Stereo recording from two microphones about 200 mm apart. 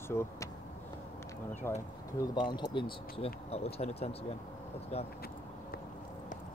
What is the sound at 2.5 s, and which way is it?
Speech, 20° left (ahead or behind).